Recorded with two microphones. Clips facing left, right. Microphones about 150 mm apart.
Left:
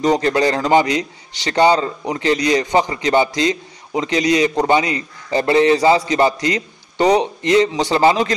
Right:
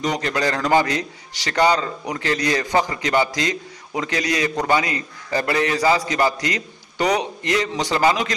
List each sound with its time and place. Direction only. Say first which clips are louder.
0.0 s a man's voice: left 7 dB; 30° left (ahead or behind)